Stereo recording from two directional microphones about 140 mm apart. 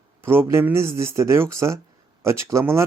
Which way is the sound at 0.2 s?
15° right (ahead or behind).